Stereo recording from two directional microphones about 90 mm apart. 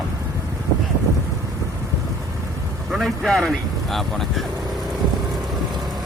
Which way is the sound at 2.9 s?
5° right (ahead or behind).